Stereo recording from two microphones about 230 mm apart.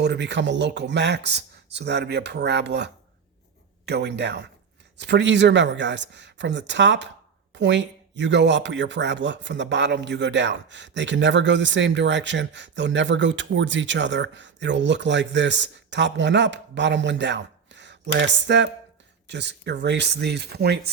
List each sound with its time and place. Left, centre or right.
0.0 s speech: right